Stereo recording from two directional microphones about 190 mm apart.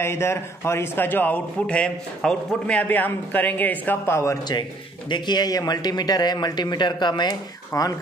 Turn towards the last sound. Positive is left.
turn(degrees=20)  # may be behind; listen again after turning